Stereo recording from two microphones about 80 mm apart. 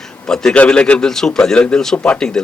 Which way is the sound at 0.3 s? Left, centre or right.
Centre.